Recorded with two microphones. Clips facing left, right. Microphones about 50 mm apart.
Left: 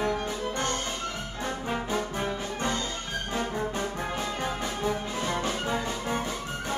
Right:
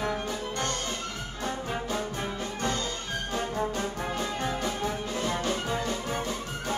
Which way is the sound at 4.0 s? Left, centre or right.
Centre.